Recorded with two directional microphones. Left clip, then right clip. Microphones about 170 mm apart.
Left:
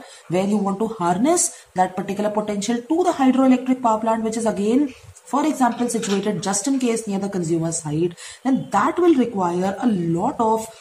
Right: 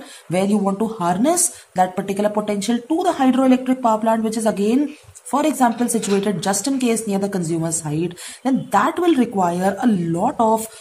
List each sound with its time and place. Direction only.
0.3 s a woman's voice: 35° right (ahead or behind)